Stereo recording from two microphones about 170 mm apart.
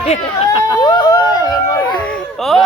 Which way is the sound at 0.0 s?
40° left (ahead or behind).